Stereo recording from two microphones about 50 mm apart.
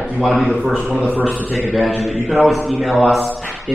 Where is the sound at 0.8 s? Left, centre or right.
Right.